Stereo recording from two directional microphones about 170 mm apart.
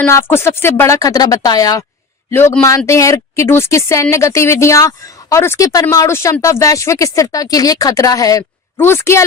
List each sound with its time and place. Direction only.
0.0 s speech: 15° left (ahead or behind)